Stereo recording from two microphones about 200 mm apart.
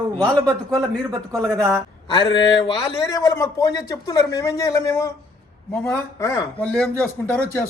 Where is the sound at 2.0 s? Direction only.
20° left (ahead or behind).